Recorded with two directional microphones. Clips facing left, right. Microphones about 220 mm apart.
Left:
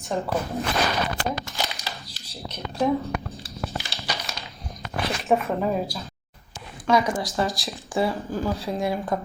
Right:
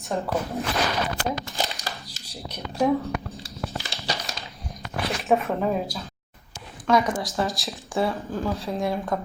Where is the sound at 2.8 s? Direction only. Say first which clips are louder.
Right 1 dB; centre (ahead or behind).